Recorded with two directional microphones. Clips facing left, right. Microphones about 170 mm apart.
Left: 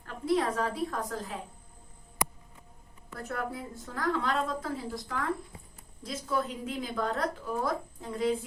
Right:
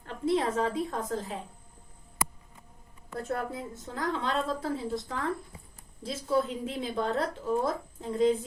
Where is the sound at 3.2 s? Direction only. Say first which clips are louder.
Right 2 dB; 25° right (ahead or behind).